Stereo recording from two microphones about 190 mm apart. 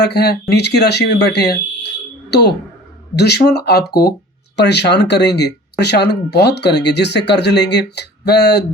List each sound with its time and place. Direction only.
0.0 s speech: 60° left (ahead or behind)